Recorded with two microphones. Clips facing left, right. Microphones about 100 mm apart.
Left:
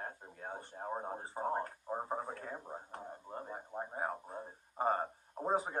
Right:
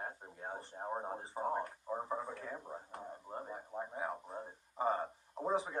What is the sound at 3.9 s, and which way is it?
Speech, 40° left (ahead or behind).